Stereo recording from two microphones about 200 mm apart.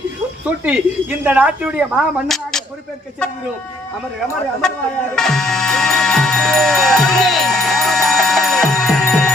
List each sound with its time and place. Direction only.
0.4 s speech: 5° right (ahead or behind)
5.1 s music: centre (ahead or behind)